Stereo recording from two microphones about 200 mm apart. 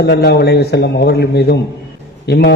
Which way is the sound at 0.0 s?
55° left (ahead or behind).